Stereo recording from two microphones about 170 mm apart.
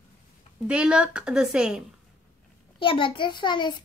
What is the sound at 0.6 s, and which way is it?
A woman's voice, 5° right (ahead or behind).